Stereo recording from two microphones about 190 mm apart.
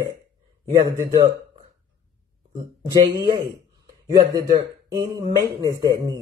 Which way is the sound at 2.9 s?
20° right (ahead or behind).